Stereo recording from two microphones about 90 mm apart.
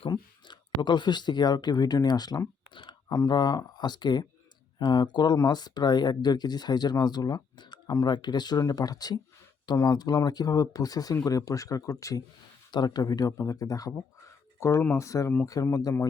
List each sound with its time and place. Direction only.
0.1 s speech: 55° left (ahead or behind)
2.6 s clicking: 60° left (ahead or behind)
3.1 s speech: 45° left (ahead or behind)
12.7 s speech: 50° left (ahead or behind)